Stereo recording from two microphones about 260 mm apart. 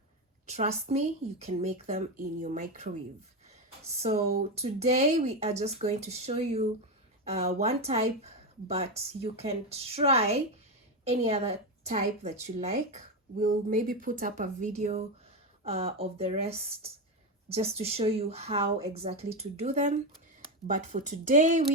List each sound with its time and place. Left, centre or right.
0.4 s a woman's voice: right
4.5 s a woman's voice: right